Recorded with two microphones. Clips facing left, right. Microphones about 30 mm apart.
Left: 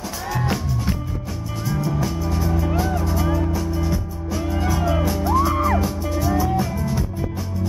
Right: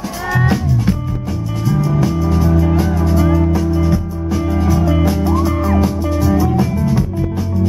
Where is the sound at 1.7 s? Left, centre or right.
Centre.